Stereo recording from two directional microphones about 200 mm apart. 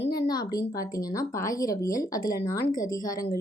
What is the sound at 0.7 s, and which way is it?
Speech, 15° left (ahead or behind).